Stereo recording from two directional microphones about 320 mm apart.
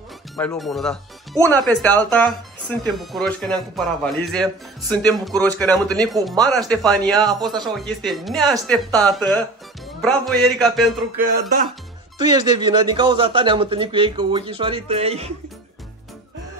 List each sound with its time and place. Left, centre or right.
0.4 s speech: centre
7.2 s speech: centre
8.0 s speech: centre
11.1 s speech: right
12.2 s speech: centre